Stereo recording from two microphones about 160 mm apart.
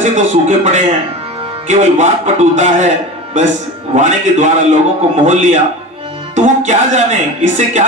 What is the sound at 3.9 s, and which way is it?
Music, 50° right (ahead or behind).